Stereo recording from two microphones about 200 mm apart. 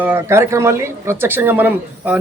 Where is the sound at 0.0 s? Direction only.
10° right (ahead or behind).